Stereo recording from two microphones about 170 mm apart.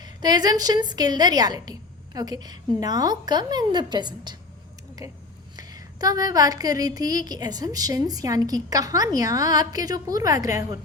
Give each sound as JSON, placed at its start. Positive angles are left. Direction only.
{"t": 0.0, "sound": "a woman's voice", "side_deg": -25}